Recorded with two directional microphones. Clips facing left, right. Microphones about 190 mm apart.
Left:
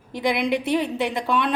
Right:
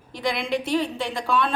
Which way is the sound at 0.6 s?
20° left (ahead or behind).